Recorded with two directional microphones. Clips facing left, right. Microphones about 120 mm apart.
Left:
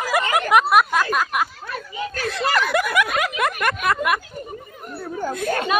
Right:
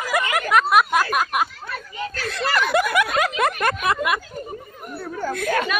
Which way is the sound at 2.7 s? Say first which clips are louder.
Right 1 dB; 30° right (ahead or behind).